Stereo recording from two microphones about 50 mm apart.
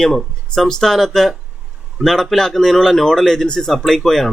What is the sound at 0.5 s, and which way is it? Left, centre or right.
A man's voice, centre.